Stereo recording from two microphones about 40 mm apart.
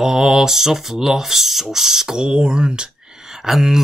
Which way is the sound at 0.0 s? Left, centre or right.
Centre.